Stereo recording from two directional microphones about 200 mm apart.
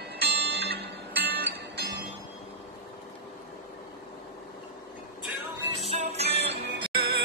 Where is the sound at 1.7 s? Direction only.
55° right (ahead or behind).